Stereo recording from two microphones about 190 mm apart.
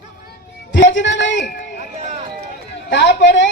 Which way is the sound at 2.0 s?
40° right (ahead or behind).